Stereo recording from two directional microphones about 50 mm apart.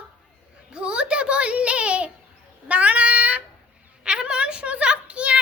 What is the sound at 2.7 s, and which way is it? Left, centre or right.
Child singing, right.